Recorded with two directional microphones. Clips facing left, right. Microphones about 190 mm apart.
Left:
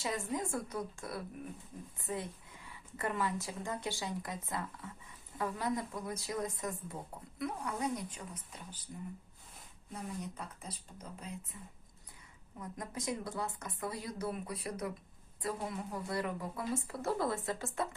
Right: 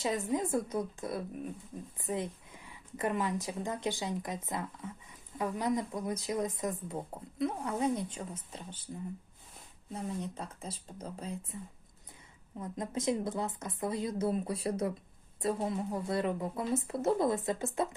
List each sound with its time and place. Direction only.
0.0 s speech: 20° right (ahead or behind)
9.9 s speech: 30° right (ahead or behind)
12.5 s speech: 25° right (ahead or behind)